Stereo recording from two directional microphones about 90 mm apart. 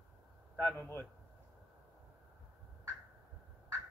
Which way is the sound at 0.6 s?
15° left (ahead or behind).